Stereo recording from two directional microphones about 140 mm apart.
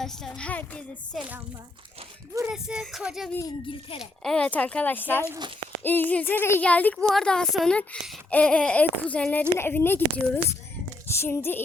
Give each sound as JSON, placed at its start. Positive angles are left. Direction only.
{"t": 0.0, "sound": "speech", "side_deg": 5}
{"t": 2.5, "sound": "speech", "side_deg": -5}
{"t": 3.7, "sound": "speech", "side_deg": 40}
{"t": 4.2, "sound": "speech", "side_deg": 5}